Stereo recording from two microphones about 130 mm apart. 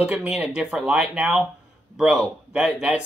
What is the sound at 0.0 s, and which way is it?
Speech, 10° right (ahead or behind).